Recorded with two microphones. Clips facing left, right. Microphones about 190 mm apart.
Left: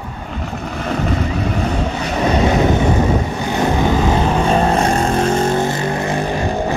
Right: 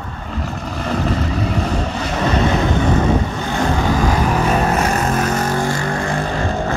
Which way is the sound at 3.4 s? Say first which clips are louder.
Left 4 dB; 20° left (ahead or behind).